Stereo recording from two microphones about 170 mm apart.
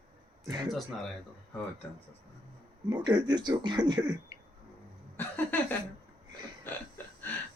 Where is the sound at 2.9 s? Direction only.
25° right (ahead or behind).